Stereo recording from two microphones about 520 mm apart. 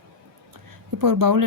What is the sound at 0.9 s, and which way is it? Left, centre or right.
Speech, right.